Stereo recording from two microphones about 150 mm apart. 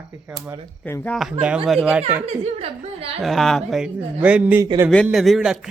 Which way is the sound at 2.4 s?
40° right (ahead or behind).